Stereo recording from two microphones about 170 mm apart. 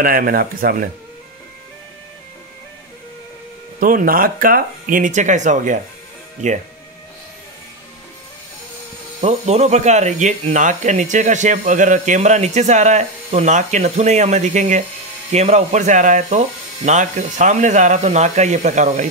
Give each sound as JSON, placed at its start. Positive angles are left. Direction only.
{"t": 0.0, "sound": "speech", "side_deg": -55}
{"t": 3.8, "sound": "speech", "side_deg": -55}
{"t": 9.2, "sound": "speech", "side_deg": -40}